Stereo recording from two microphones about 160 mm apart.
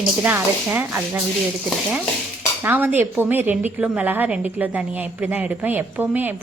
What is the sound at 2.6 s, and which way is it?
A woman's voice, 10° right (ahead or behind).